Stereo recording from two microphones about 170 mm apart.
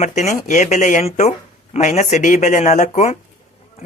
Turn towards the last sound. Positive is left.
turn(degrees=40)  # may be behind; listen again after turning